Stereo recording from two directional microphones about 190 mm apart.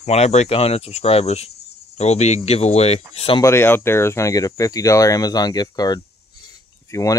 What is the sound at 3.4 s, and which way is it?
Speech, 15° left (ahead or behind).